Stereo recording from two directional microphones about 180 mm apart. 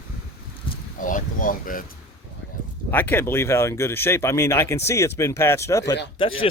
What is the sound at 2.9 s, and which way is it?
Speech, 10° left (ahead or behind).